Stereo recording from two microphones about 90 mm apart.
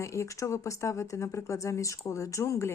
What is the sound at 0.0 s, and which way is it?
Speech, 35° left (ahead or behind).